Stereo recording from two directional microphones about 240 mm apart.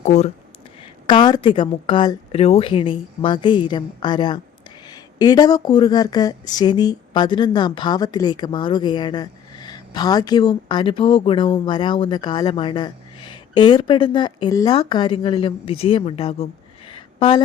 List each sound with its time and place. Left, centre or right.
0.0 s speech: left